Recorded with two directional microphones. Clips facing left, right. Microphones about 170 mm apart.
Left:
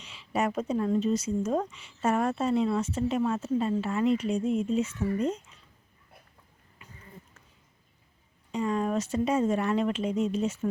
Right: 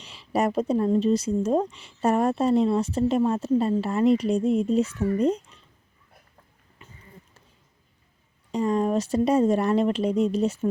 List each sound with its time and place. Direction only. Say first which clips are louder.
0.0 s speech: right 4 dB; 35° right (ahead or behind)
8.5 s speech: right 5 dB; 35° right (ahead or behind)